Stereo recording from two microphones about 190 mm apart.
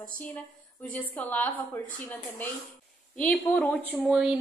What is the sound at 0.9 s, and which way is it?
A woman's voice, 10° left (ahead or behind).